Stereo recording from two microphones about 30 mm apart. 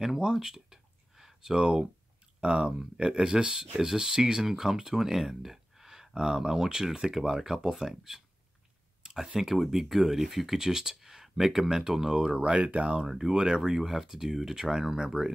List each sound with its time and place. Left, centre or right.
0.2 s a sound: right
2.4 s speech: right; by 8.2 s centre
9.0 s a sound: centre
9.4 s speech: centre
12.4 s speech: right
13.3 s speech: right